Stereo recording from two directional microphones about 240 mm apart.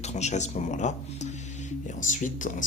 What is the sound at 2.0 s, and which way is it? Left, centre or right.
Speech, left.